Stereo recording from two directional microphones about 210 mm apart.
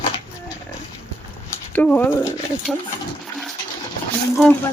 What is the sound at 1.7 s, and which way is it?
Speech, 10° left (ahead or behind).